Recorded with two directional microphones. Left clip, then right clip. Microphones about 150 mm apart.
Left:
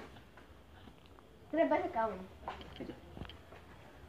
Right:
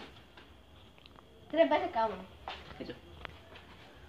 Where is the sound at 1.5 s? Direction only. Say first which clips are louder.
Right 4 dB; 5° right (ahead or behind).